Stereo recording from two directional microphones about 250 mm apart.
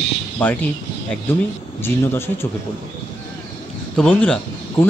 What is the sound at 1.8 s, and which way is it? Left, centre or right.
Speech, centre.